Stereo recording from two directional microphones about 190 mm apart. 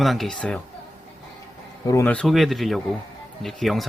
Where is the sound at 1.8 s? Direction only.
10° left (ahead or behind).